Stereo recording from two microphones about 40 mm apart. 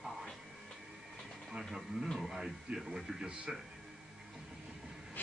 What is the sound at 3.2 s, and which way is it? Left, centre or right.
Speech, right.